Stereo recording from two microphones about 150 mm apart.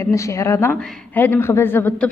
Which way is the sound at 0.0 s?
20° left (ahead or behind).